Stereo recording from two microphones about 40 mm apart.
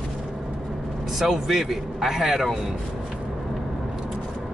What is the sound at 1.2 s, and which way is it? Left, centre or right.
A man's voice, centre.